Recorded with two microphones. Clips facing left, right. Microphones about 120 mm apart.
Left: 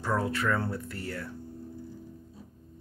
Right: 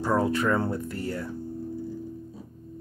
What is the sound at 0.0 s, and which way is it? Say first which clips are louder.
Speech: right 5 dB; 15° right (ahead or behind).